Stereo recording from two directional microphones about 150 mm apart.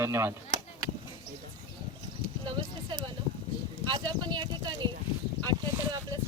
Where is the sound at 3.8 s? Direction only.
30° right (ahead or behind).